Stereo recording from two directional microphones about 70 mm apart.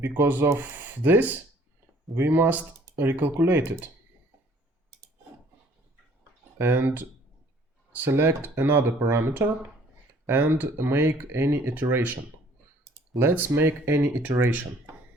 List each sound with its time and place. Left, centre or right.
0.0 s speech: right
6.6 s speech: right
13.1 s speech: right